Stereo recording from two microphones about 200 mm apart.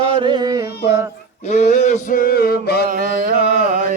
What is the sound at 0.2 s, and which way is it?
Carnatic music, 20° right (ahead or behind).